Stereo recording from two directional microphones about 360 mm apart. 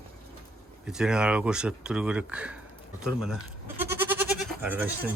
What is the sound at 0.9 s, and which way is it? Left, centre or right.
Speech, centre.